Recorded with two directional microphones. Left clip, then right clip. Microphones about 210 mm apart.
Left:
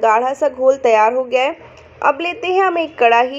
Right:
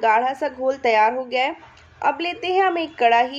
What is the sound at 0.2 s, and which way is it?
Speech, 20° right (ahead or behind).